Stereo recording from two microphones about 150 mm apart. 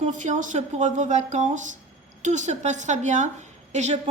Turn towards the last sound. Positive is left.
turn(degrees=-50)  # may be behind; listen again after turning